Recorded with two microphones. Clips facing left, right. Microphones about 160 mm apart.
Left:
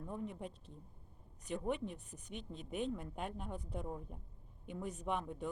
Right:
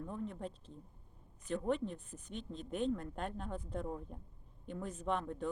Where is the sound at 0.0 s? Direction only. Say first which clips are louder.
Right 2 dB; 10° left (ahead or behind).